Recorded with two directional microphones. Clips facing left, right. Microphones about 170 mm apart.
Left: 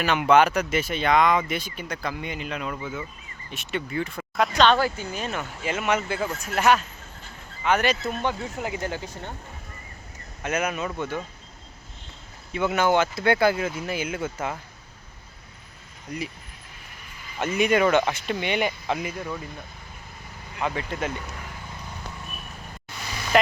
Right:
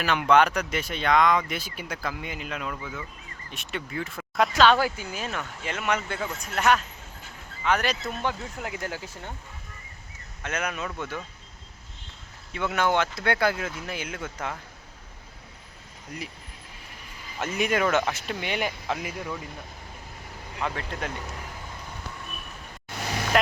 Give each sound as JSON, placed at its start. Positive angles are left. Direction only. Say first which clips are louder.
{"t": 0.0, "sound": "speech", "louder": "left 2 dB", "side_deg": 5}
{"t": 10.4, "sound": "speech", "louder": "left 4 dB", "side_deg": 5}
{"t": 12.5, "sound": "speech", "louder": "left 3 dB", "side_deg": 5}
{"t": 16.1, "sound": "speech", "louder": "left 5 dB", "side_deg": 0}
{"t": 17.4, "sound": "speech", "louder": "left 4 dB", "side_deg": 0}
{"t": 20.6, "sound": "speech", "louder": "left 3 dB", "side_deg": 5}
{"t": 23.0, "sound": "vehicle", "louder": "right 5 dB", "side_deg": -65}